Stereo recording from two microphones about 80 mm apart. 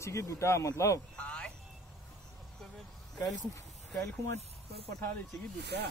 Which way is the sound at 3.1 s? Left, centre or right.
Left.